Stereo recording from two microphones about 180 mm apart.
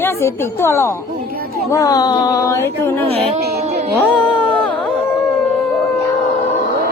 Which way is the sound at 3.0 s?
35° right (ahead or behind).